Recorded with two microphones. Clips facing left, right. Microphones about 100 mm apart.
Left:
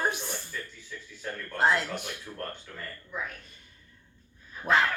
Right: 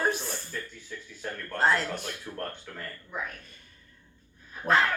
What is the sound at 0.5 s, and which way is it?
Music, 50° right (ahead or behind).